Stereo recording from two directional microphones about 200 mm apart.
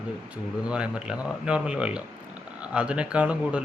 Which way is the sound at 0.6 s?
5° right (ahead or behind).